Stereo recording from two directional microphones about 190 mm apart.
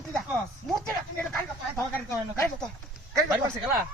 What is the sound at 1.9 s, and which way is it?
Speech, 15° left (ahead or behind).